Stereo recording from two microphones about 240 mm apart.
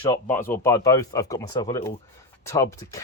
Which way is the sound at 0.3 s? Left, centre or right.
Centre.